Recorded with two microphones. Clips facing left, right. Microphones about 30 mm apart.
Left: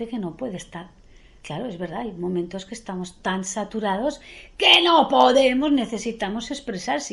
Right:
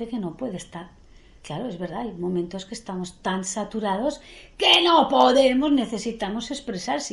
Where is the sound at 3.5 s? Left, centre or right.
Left.